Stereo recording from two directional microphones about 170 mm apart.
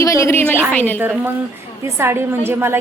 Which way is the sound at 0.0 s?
15° left (ahead or behind).